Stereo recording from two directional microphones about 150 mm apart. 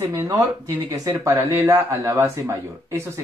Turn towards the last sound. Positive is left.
turn(degrees=-20)  # may be behind; listen again after turning